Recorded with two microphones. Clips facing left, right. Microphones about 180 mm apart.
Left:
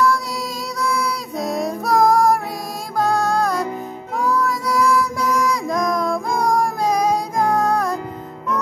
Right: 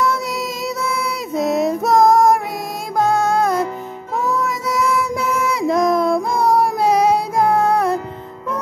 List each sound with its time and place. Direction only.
0.8 s music: 25° right (ahead or behind)
4.2 s child singing: 20° right (ahead or behind)
6.4 s child singing: 5° right (ahead or behind)
7.5 s music: 25° right (ahead or behind)